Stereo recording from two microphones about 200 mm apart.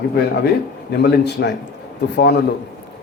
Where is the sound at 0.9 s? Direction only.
55° left (ahead or behind).